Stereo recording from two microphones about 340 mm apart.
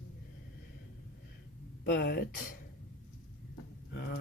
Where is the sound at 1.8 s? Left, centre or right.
Left.